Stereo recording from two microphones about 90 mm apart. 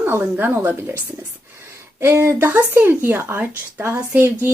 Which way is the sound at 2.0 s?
30° right (ahead or behind).